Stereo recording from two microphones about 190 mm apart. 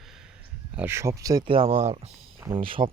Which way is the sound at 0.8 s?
15° right (ahead or behind).